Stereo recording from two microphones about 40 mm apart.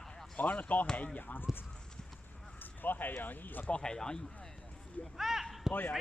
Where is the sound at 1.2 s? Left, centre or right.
Left.